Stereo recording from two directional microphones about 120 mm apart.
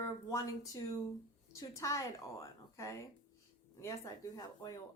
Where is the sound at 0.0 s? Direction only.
30° left (ahead or behind).